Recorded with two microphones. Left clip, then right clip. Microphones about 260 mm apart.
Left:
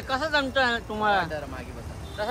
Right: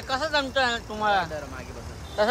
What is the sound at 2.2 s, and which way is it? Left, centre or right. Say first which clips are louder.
Speech: right 7 dB; right.